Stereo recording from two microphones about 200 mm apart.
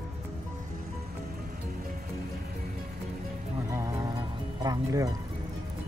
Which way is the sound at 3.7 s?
15° right (ahead or behind).